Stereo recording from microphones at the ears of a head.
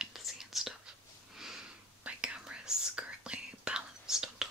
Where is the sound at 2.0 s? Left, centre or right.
Centre.